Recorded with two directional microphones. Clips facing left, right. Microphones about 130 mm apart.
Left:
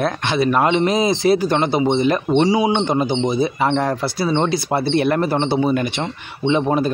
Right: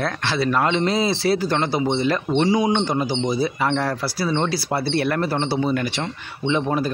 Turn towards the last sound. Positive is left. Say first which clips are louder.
# left 4 dB
turn(degrees=25)  # may be behind; listen again after turning